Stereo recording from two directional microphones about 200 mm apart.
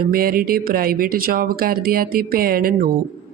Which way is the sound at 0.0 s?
45° right (ahead or behind).